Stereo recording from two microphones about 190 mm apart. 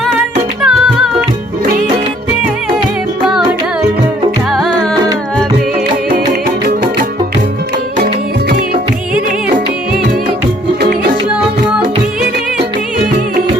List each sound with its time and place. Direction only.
0.6 s music: centre (ahead or behind)
4.5 s music: centre (ahead or behind)
7.9 s music: 50° right (ahead or behind)